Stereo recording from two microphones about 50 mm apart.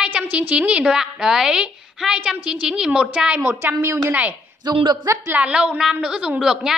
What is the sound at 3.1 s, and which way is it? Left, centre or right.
Speech, right.